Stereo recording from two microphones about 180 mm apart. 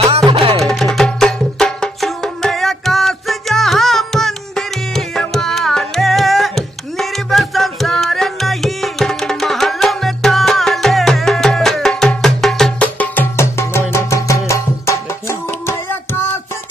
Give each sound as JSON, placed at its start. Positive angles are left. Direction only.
{"t": 0.3, "sound": "music", "side_deg": -30}
{"t": 0.6, "sound": "music", "side_deg": 0}